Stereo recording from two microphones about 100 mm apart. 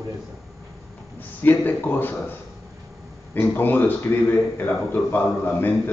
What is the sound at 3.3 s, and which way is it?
A man's voice, 20° left (ahead or behind).